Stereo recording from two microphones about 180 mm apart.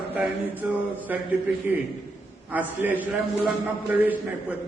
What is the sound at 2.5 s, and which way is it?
A man's voice, 10° right (ahead or behind).